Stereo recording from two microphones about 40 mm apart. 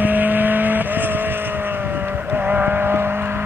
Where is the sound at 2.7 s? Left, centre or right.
Right.